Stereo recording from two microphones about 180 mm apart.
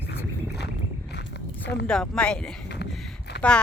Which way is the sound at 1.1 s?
65° left (ahead or behind).